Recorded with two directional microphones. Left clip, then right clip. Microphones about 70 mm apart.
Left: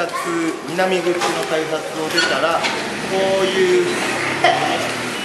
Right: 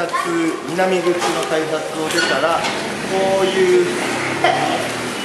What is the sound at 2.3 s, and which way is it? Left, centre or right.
Speech, centre.